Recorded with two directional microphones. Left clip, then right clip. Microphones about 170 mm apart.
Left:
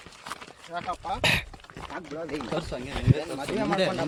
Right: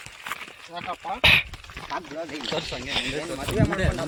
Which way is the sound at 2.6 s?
40° left (ahead or behind).